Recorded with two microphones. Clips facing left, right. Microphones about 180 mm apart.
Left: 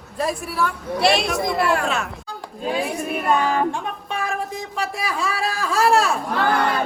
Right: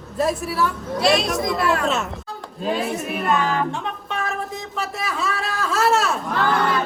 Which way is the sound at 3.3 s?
50° left (ahead or behind).